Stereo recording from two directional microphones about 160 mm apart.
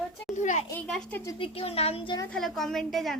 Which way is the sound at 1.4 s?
35° left (ahead or behind).